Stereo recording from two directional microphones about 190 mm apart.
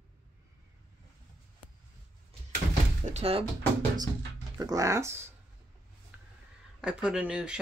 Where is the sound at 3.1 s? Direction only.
30° right (ahead or behind).